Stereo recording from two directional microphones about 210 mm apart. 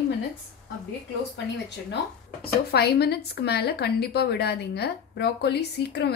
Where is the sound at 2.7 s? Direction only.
50° left (ahead or behind).